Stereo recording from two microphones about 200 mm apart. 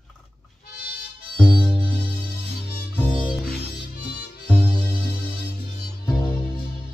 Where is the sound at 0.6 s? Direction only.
50° left (ahead or behind).